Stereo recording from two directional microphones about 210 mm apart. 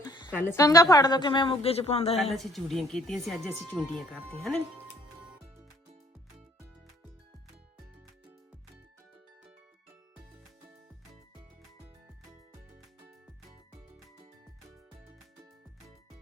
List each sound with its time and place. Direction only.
0.0 s a sound: 20° left (ahead or behind)
0.3 s a woman's voice: 15° left (ahead or behind); by 2.3 s 30° left (ahead or behind)
2.3 s speech: centre (ahead or behind)